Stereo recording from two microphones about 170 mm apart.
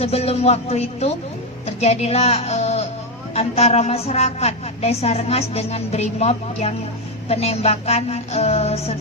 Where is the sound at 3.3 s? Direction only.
40° left (ahead or behind).